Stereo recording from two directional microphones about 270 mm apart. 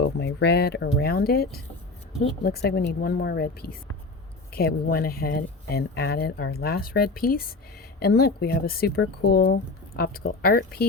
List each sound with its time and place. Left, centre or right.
0.0 s speech: left